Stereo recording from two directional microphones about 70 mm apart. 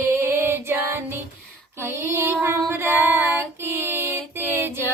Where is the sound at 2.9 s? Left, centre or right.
Right.